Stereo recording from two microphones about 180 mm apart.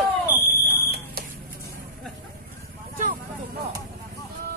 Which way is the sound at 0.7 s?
60° right (ahead or behind).